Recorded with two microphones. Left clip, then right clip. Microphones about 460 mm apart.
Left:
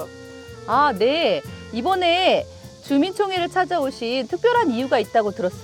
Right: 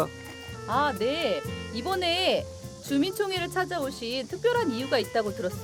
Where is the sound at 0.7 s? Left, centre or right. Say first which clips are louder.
Left 8 dB; left.